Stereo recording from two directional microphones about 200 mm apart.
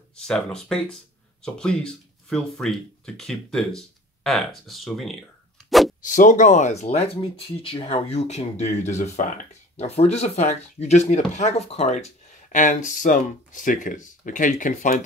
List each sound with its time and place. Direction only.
0.2 s speech: 5° left (ahead or behind)
5.7 s a sound: centre (ahead or behind)
6.0 s speech: 40° left (ahead or behind)